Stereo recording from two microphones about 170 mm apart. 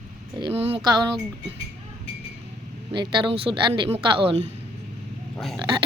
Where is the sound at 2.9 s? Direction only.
25° right (ahead or behind).